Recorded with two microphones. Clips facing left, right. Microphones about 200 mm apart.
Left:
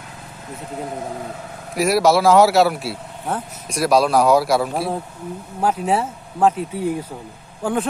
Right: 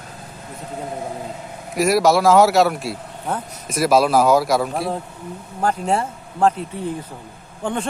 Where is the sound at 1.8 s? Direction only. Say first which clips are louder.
Even; centre (ahead or behind).